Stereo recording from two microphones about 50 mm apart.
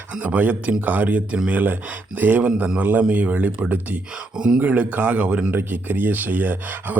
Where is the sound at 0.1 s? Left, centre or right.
Right.